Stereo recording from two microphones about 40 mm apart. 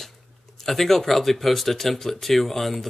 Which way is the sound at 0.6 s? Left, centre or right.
Centre.